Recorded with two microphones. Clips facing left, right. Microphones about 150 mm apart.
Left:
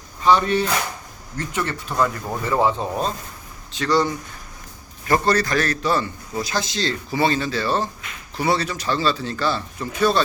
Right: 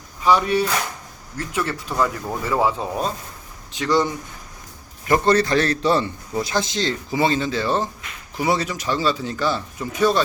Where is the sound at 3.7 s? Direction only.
15° right (ahead or behind).